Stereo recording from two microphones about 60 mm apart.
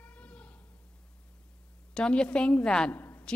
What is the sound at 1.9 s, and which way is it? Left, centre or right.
Speech, centre.